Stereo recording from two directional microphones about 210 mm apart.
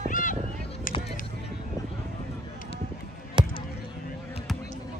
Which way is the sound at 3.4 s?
25° right (ahead or behind).